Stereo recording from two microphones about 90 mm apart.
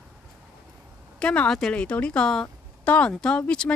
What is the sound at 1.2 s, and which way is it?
A woman's voice, 10° left (ahead or behind).